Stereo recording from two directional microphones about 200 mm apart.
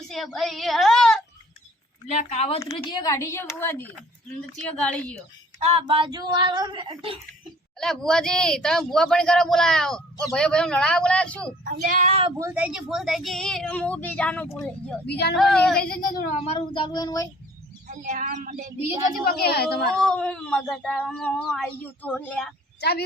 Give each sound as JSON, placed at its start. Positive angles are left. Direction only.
{"t": 0.1, "sound": "speech", "side_deg": 0}
{"t": 2.0, "sound": "speech", "side_deg": 35}
{"t": 5.5, "sound": "speech", "side_deg": -30}
{"t": 7.8, "sound": "speech", "side_deg": 5}
{"t": 11.6, "sound": "speech", "side_deg": -45}
{"t": 12.4, "sound": "speech", "side_deg": -10}
{"t": 15.0, "sound": "speech", "side_deg": 55}
{"t": 15.4, "sound": "speech", "side_deg": 0}
{"t": 15.8, "sound": "speech", "side_deg": 45}
{"t": 17.8, "sound": "speech", "side_deg": -40}
{"t": 19.2, "sound": "a woman's voice", "side_deg": 50}
{"t": 19.9, "sound": "speech", "side_deg": 5}
{"t": 22.8, "sound": "a woman's voice", "side_deg": 55}